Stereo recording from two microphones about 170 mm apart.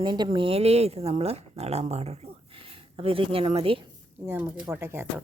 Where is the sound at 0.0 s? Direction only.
25° right (ahead or behind).